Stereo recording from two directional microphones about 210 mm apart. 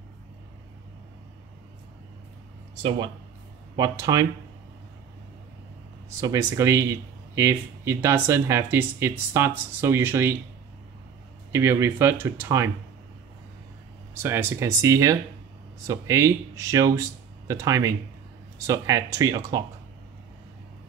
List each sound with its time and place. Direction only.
3.7 s speech: 15° right (ahead or behind)
6.2 s speech: 15° right (ahead or behind)
11.5 s speech: 15° right (ahead or behind)
14.1 s speech: 10° right (ahead or behind)